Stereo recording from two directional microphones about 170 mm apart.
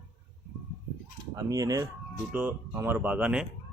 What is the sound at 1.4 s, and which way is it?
Speech, 20° right (ahead or behind).